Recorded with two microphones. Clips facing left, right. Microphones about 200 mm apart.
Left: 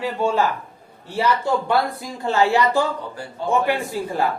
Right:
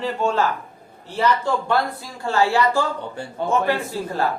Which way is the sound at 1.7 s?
15° left (ahead or behind).